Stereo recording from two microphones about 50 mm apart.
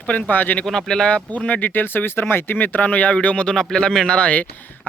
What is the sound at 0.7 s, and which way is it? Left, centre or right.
Speech, centre.